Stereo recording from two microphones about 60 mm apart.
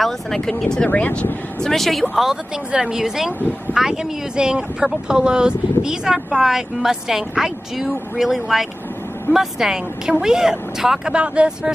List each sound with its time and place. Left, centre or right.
0.0 s speech: centre
0.8 s speech: left
1.6 s speech: centre